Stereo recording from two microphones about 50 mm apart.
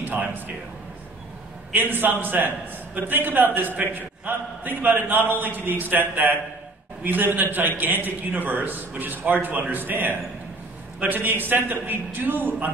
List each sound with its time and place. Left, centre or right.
0.0 s speech: right
1.7 s a man's voice: right